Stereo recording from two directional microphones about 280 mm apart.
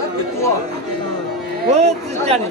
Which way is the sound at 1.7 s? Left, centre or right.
Right.